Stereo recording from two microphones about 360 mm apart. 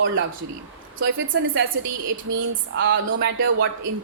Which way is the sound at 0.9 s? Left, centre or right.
Right.